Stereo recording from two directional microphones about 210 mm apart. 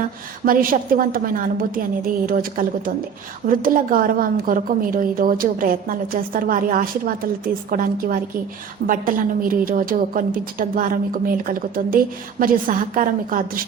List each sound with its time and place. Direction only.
0.4 s a woman's voice: 40° right (ahead or behind)